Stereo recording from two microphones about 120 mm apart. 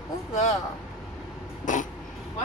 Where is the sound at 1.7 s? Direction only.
90° left.